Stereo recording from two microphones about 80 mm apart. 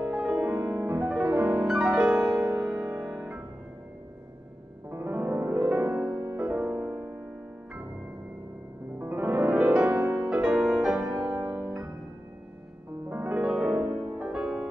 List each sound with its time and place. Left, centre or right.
0.0 s music: centre
0.7 s music: right
1.0 s music: centre
4.9 s music: right
9.0 s piano: right
9.6 s music: centre
9.8 s music: right
10.3 s music: centre
11.3 s music: right
13.1 s piano: right
13.4 s music: centre